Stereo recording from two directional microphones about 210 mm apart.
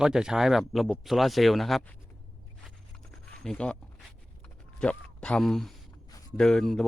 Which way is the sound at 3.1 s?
Centre (ahead or behind).